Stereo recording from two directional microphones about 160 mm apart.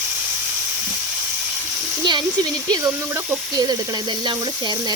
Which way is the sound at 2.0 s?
25° right (ahead or behind).